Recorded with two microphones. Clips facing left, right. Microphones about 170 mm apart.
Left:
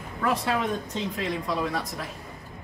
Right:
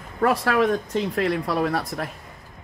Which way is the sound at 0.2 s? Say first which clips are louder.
Right 6 dB; 70° right (ahead or behind).